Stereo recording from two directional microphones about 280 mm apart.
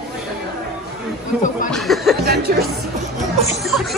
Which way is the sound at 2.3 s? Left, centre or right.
Right.